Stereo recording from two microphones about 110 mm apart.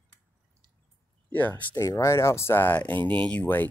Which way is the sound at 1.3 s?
15° left (ahead or behind).